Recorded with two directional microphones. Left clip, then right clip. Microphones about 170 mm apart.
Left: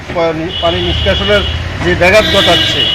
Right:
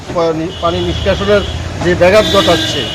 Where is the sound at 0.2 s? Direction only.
15° right (ahead or behind).